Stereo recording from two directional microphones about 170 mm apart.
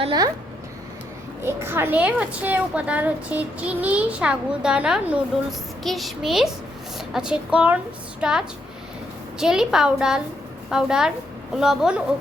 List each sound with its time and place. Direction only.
0.0 s speech: 25° right (ahead or behind)
1.5 s a child's voice: 15° right (ahead or behind)